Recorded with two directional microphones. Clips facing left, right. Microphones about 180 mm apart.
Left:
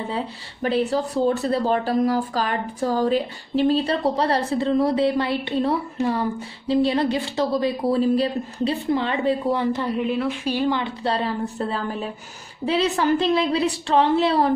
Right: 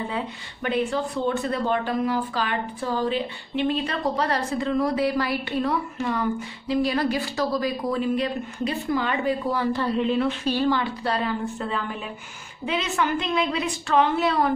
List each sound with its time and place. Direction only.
0.1 s speech: 35° left (ahead or behind)
10.0 s a woman's voice: 5° left (ahead or behind); by 14.5 s 30° left (ahead or behind)